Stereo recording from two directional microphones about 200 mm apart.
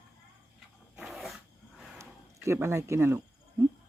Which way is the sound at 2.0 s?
15° right (ahead or behind).